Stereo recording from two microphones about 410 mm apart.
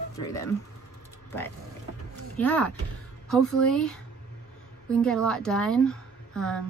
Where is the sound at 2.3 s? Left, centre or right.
Centre.